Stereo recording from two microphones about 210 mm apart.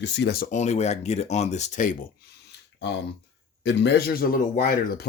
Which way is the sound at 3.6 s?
55° left (ahead or behind).